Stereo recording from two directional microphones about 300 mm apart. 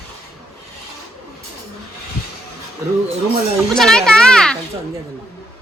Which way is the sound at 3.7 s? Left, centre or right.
Centre.